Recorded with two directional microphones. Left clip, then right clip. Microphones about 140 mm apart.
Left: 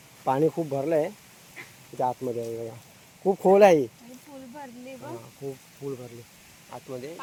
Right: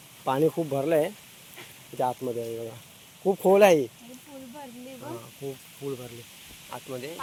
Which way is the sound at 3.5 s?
25° left (ahead or behind).